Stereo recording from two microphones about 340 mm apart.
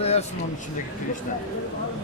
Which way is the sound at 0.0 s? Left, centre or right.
Centre.